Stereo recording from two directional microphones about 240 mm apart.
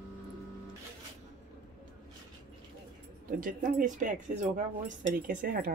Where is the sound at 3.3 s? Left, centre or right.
Right.